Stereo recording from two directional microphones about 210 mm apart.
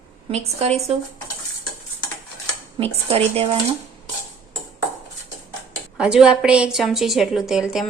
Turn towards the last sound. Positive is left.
turn(degrees=0)  # may be behind; listen again after turning